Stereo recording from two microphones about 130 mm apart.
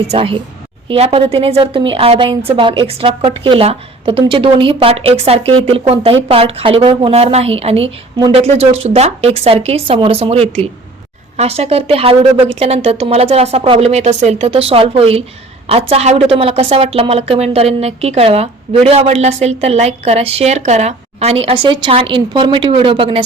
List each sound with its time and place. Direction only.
0.1 s a woman's voice: 45° right (ahead or behind)